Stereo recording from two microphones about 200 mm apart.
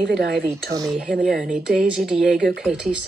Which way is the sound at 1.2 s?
Centre (ahead or behind).